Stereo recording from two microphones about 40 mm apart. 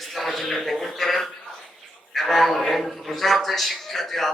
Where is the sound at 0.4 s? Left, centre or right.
Centre.